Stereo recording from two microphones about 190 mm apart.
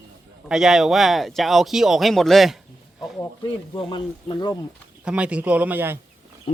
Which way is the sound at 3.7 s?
25° left (ahead or behind).